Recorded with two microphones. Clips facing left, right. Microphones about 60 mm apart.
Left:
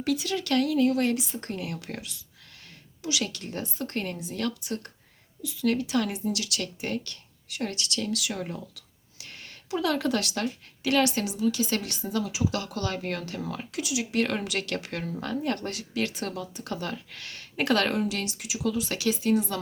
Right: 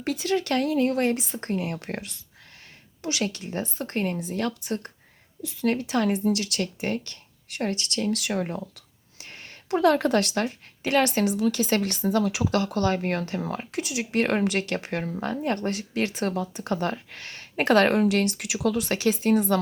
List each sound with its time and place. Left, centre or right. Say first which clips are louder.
0.0 s speech: right 2 dB; right
8.5 s a sound: right 5 dB; right
9.6 s speech: right 6 dB; right
12.5 s speech: right 7 dB; right
17.9 s speech: right 7 dB; right
18.9 s speech: right 2 dB; right